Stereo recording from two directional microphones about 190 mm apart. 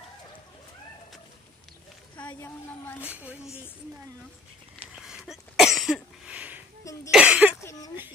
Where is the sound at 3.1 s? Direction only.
10° right (ahead or behind).